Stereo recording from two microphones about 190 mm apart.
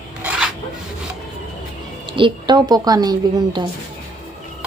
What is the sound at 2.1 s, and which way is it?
A woman's voice, 25° right (ahead or behind).